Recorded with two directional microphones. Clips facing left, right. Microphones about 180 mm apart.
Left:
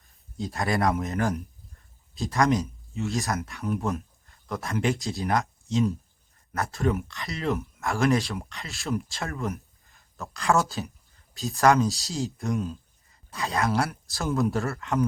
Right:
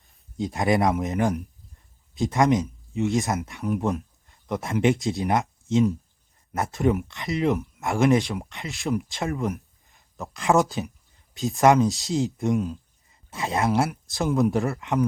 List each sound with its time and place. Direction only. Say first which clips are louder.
0.3 s speech: right 5 dB; 20° right (ahead or behind)